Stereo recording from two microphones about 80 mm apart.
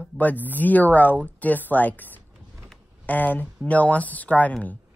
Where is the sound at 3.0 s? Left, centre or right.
Left.